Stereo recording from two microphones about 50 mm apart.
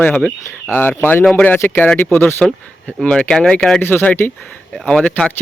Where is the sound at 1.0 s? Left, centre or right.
Left.